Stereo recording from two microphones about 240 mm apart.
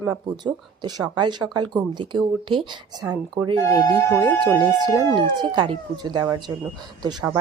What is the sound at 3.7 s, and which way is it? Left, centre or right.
Speech, centre.